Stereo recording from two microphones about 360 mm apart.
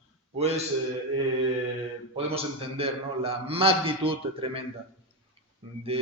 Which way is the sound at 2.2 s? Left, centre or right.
Centre.